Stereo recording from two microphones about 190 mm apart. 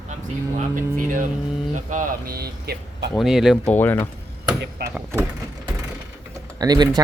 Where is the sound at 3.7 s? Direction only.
10° left (ahead or behind).